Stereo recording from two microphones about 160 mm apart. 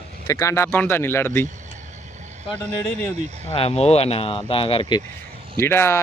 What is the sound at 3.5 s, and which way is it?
Speech, 40° left (ahead or behind).